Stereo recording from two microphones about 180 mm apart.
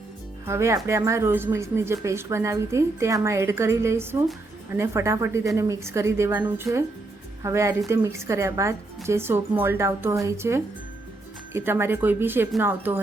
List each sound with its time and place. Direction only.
0.4 s speech: 15° right (ahead or behind)